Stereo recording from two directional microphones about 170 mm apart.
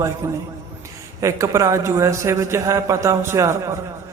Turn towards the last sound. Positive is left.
turn(degrees=-15)  # may be behind; listen again after turning